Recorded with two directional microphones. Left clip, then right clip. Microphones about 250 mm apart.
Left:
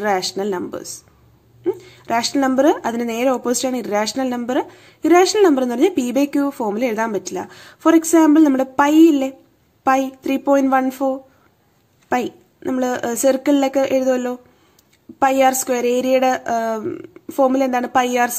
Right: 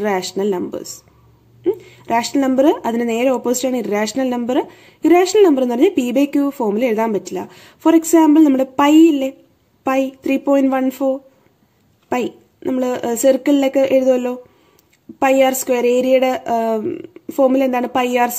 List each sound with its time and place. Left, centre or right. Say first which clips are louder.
0.0 s speech: right 1 dB; centre
2.3 s speech: right 1 dB; centre